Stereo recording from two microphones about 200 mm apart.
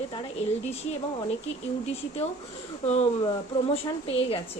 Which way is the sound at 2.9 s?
30° left (ahead or behind).